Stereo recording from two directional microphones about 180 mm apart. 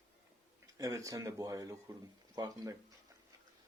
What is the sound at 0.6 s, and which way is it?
Speech, 20° right (ahead or behind).